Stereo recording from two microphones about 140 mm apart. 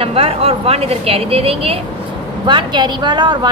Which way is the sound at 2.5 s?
35° right (ahead or behind).